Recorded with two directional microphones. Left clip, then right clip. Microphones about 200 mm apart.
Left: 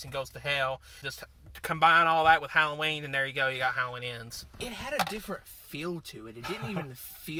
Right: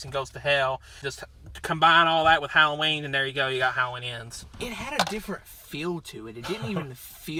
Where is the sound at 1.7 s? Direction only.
15° left (ahead or behind).